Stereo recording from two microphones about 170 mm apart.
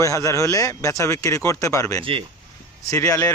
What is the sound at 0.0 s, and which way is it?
Speech, 20° left (ahead or behind).